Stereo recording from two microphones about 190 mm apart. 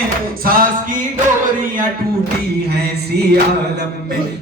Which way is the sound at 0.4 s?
50° right (ahead or behind).